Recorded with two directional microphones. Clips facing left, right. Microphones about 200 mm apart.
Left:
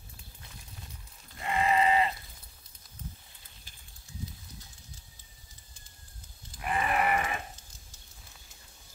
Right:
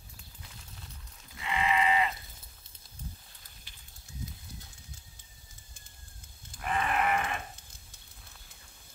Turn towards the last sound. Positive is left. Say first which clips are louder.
# left 1 dB
turn(degrees=5)  # may be behind; listen again after turning